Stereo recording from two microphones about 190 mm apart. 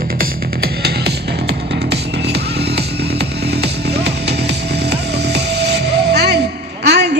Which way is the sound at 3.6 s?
60° right (ahead or behind).